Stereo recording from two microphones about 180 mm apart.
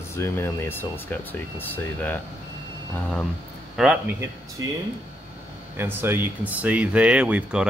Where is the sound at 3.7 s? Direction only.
5° right (ahead or behind).